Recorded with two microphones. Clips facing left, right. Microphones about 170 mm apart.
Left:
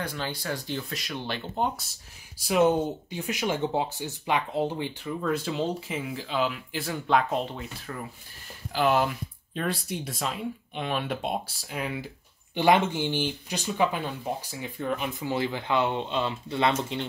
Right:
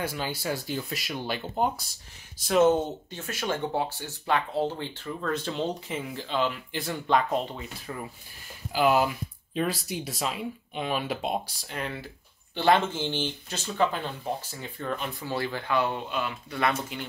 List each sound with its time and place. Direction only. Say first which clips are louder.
0.0 s speech: right 2 dB; 5° right (ahead or behind)
2.3 s speech: right 1 dB; 10° left (ahead or behind); by 17.1 s 25° left (ahead or behind)